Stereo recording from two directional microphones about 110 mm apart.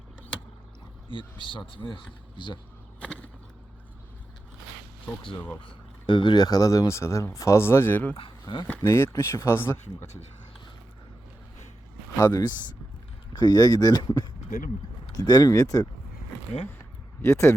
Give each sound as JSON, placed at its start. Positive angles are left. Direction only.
{"t": 1.1, "sound": "speech", "side_deg": 50}
{"t": 3.0, "sound": "a sound", "side_deg": 10}
{"t": 5.6, "sound": "speech", "side_deg": 50}
{"t": 8.1, "sound": "speech", "side_deg": 50}
{"t": 8.8, "sound": "speech", "side_deg": 25}
{"t": 12.2, "sound": "speech", "side_deg": 35}
{"t": 17.2, "sound": "speech", "side_deg": 25}